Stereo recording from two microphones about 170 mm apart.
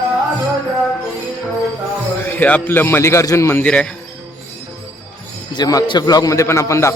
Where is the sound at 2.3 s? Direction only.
10° left (ahead or behind).